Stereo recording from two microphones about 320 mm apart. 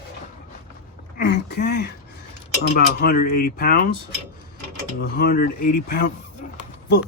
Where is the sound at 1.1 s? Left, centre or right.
Left.